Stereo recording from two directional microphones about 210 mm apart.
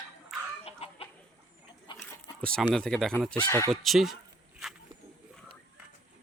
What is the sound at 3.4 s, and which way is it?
Speech, 15° left (ahead or behind).